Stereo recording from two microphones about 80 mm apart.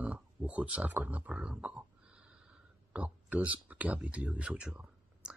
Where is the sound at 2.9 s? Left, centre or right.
Centre.